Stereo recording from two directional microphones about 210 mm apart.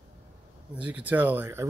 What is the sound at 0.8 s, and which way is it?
Speech, 5° right (ahead or behind).